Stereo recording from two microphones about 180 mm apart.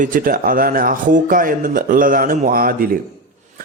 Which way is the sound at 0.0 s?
50° right (ahead or behind).